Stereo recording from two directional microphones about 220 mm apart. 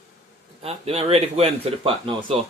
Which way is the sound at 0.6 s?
25° right (ahead or behind).